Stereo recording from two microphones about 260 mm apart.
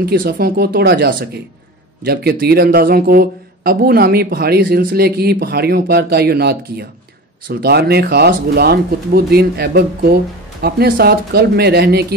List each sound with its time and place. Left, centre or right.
0.0 s speech: right